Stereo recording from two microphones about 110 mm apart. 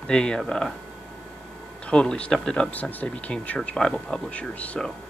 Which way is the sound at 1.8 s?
10° left (ahead or behind).